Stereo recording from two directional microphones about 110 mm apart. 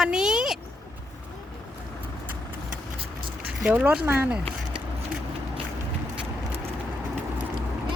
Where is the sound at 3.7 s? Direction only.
15° right (ahead or behind).